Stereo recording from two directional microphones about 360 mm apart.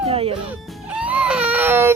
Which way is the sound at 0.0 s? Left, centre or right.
Centre.